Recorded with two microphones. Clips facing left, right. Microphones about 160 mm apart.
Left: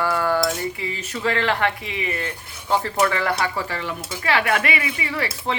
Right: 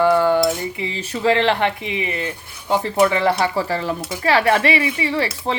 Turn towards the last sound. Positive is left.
turn(degrees=-30)  # may be behind; listen again after turning